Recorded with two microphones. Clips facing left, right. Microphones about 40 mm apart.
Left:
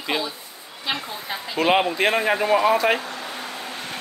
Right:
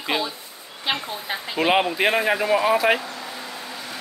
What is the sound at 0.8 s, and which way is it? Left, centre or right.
Speech, right.